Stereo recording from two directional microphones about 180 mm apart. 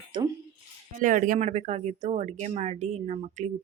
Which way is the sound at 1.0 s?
50° right (ahead or behind).